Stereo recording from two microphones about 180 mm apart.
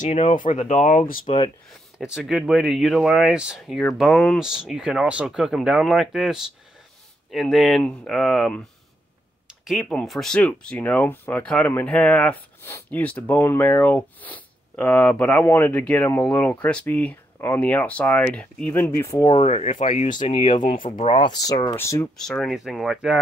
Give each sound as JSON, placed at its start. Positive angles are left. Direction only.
{"t": 0.4, "sound": "speech", "side_deg": 40}
{"t": 1.2, "sound": "speech", "side_deg": 30}
{"t": 2.0, "sound": "speech", "side_deg": 0}
{"t": 9.7, "sound": "speech", "side_deg": 0}
{"t": 19.3, "sound": "speech", "side_deg": 40}
{"t": 20.3, "sound": "speech", "side_deg": 30}
{"t": 22.1, "sound": "speech", "side_deg": 0}